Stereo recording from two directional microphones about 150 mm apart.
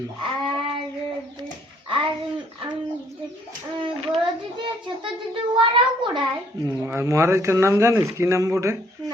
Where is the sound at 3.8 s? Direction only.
35° right (ahead or behind).